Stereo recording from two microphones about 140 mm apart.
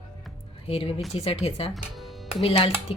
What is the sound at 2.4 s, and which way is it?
Speech, 40° left (ahead or behind).